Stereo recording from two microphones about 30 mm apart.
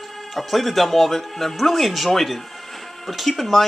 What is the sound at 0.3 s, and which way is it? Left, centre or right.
Speech, centre.